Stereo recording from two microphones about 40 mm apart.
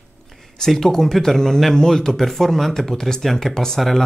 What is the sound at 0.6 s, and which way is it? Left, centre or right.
Speech, centre.